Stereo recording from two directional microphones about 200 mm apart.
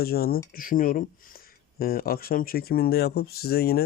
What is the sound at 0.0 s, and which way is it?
Speech, 50° left (ahead or behind).